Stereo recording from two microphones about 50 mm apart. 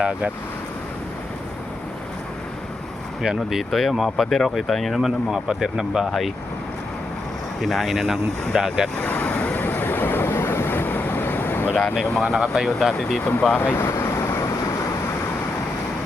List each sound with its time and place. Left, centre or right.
0.0 s speech: right
3.2 s speech: centre
6.1 s speech: centre
7.6 s speech: centre
9.0 s vehicle: left
10.3 s vehicle: left
12.2 s speech: centre
12.6 s speech: centre
13.7 s vehicle: left